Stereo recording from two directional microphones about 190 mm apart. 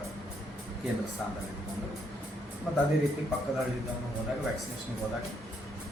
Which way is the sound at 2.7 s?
Centre (ahead or behind).